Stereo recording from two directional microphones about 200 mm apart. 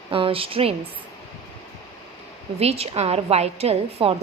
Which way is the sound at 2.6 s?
30° right (ahead or behind).